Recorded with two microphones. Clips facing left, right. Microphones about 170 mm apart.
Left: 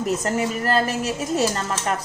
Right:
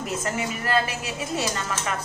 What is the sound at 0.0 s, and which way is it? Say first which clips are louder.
A woman's voice: left 6 dB; 40° left (ahead or behind).